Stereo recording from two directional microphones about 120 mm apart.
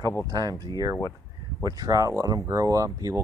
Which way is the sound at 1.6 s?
30° right (ahead or behind).